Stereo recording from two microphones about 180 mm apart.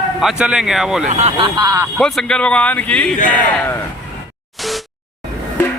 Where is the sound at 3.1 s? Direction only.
50° left (ahead or behind).